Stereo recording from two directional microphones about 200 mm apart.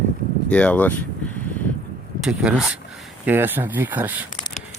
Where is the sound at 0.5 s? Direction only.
5° left (ahead or behind).